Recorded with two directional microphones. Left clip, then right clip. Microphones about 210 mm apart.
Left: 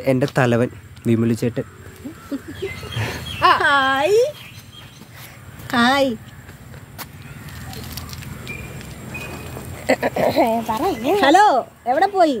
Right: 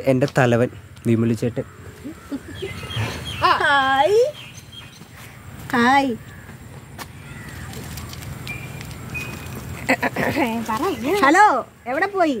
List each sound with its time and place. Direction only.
0.0 s speech: centre (ahead or behind)
3.3 s a sound: 25° left (ahead or behind)
5.7 s a woman's voice: 35° left (ahead or behind)
9.8 s speech: 30° right (ahead or behind)